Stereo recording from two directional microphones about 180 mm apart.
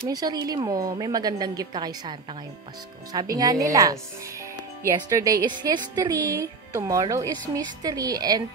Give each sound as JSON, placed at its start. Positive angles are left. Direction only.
{"t": 0.1, "sound": "a woman's voice", "side_deg": -20}